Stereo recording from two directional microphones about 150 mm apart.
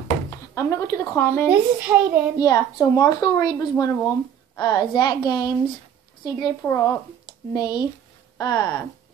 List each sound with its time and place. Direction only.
0.3 s speech: 20° left (ahead or behind)
1.5 s a child's voice: 10° right (ahead or behind)
2.3 s a woman's voice: 25° left (ahead or behind)
4.6 s a woman's voice: 25° left (ahead or behind)